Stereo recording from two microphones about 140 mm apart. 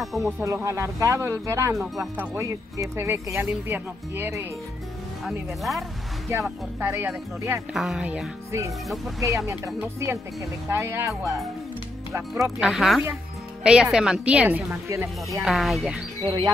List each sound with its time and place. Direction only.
0.0 s speech: centre (ahead or behind)
0.4 s a woman's voice: 20° right (ahead or behind)
5.2 s speech: centre (ahead or behind)
6.8 s a woman's voice: 15° right (ahead or behind)
7.7 s speech: centre (ahead or behind)
8.5 s speech: 20° right (ahead or behind)
8.8 s speech: centre (ahead or behind)
9.8 s speech: 20° right (ahead or behind)
12.5 s a woman's voice: 5° right (ahead or behind)
14.9 s speech: 20° right (ahead or behind)
15.4 s speech: centre (ahead or behind)